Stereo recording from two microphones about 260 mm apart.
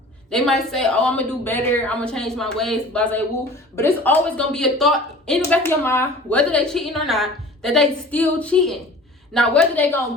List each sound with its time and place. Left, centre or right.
0.3 s a woman's voice: centre